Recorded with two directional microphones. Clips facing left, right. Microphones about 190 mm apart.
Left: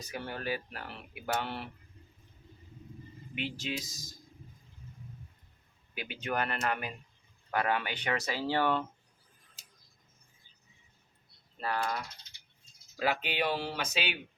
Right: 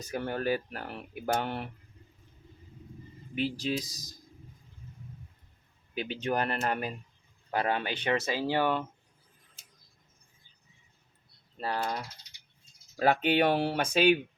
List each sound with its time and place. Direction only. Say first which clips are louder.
0.1 s speech: right 6 dB; 45° right (ahead or behind)
3.3 s speech: right 6 dB; 40° right (ahead or behind)
5.9 s speech: right 5 dB; 30° right (ahead or behind); by 8.8 s 15° right (ahead or behind)
11.6 s speech: right 1 dB; 30° right (ahead or behind)
13.0 s speech: right 7 dB; 50° right (ahead or behind)